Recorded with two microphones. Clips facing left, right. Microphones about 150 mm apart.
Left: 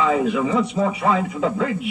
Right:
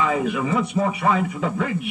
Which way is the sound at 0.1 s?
25° left (ahead or behind).